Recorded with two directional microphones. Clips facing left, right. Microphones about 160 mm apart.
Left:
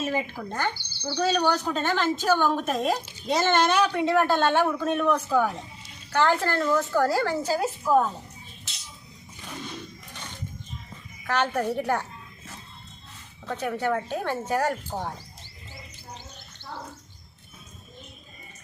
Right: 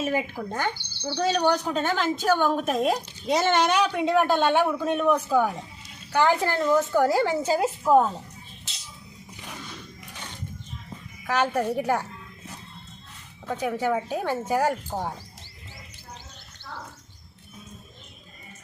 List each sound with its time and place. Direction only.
0.0 s speech: 10° right (ahead or behind)
11.3 s speech: 5° right (ahead or behind)
13.5 s speech: 10° right (ahead or behind)